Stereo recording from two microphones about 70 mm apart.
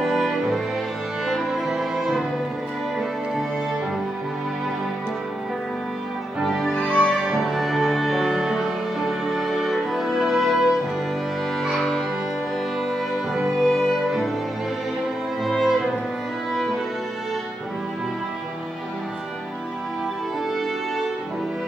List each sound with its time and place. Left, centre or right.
0.0 s music: centre
6.4 s music: centre
6.7 s music: centre
7.2 s music: centre
13.3 s music: centre
15.4 s music: centre